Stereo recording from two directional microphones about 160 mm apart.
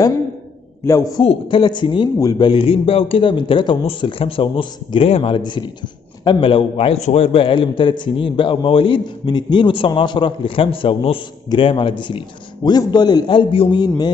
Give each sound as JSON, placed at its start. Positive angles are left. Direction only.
{"t": 0.8, "sound": "a man's voice", "side_deg": 20}
{"t": 1.2, "sound": "a man's voice", "side_deg": 35}